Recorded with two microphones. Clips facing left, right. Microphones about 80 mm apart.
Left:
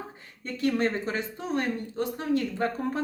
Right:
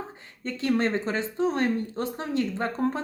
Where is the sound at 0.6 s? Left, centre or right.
Right.